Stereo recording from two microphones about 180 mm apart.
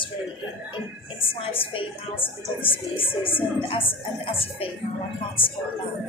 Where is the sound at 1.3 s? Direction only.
30° left (ahead or behind).